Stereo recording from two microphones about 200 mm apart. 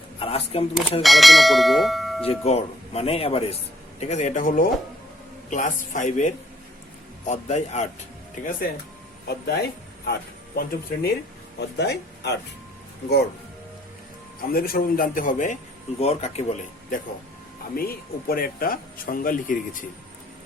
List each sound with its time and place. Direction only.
0.2 s speech: 30° left (ahead or behind)
1.0 s speech: centre (ahead or behind)
2.2 s speech: 30° left (ahead or behind)
9.2 s speech: 55° left (ahead or behind)
14.5 s speech: 45° left (ahead or behind)
17.7 s speech: 50° left (ahead or behind)